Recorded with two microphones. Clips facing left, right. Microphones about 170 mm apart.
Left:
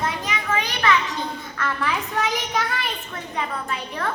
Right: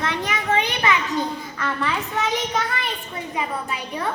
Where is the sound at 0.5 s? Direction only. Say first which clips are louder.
Right 4 dB; 30° right (ahead or behind).